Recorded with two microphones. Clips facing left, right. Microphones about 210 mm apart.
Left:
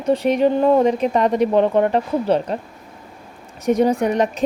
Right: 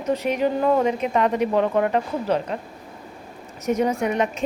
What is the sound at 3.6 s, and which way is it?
Speech, 35° left (ahead or behind).